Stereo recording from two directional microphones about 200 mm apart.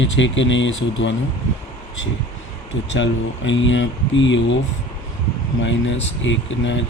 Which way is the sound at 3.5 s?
70° left (ahead or behind).